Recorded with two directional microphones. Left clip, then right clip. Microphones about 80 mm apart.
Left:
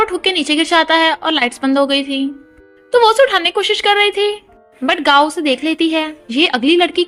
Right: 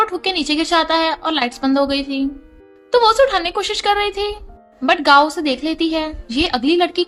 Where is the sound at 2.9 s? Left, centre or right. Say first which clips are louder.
Left 3 dB; left.